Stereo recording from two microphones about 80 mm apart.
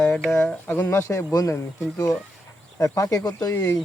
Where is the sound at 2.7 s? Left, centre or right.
Left.